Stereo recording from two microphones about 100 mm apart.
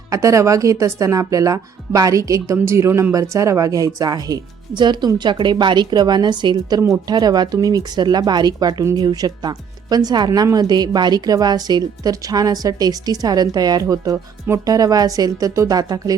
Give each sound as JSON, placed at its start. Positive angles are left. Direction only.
{"t": 0.1, "sound": "speech", "side_deg": -30}